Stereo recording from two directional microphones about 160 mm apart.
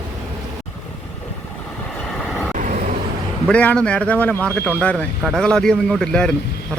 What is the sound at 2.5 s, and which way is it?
Vehicle, 50° right (ahead or behind).